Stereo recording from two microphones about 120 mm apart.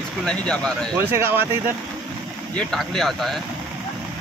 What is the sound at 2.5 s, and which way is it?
Speech, 5° left (ahead or behind).